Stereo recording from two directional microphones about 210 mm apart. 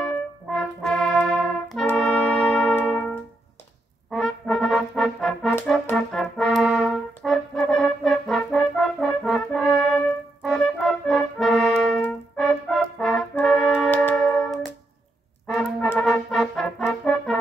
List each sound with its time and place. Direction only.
0.6 s brass instrument: 5° left (ahead or behind)
4.1 s music: centre (ahead or behind)
5.9 s brass instrument: centre (ahead or behind)